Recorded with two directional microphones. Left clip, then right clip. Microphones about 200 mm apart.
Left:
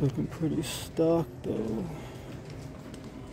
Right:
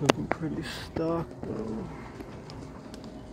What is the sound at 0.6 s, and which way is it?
Speech, 55° left (ahead or behind).